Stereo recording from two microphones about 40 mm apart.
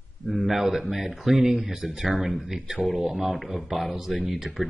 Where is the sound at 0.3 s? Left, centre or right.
Centre.